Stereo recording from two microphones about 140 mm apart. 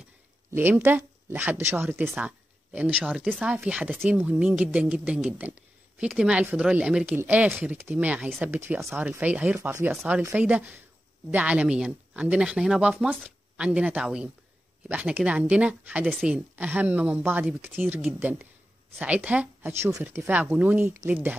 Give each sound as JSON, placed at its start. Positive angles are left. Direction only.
{"t": 0.5, "sound": "speech", "side_deg": -15}